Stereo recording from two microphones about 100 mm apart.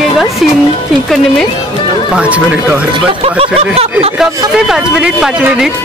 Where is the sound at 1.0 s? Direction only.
Centre (ahead or behind).